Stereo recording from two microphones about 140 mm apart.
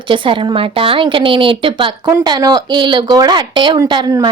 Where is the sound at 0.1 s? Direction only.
40° right (ahead or behind).